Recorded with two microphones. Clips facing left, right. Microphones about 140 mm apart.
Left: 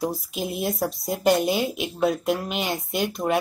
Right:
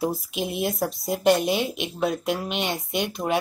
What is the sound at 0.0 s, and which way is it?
Speech, centre (ahead or behind).